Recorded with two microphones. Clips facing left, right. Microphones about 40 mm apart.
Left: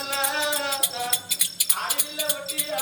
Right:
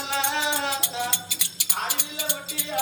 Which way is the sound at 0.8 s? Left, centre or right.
Centre.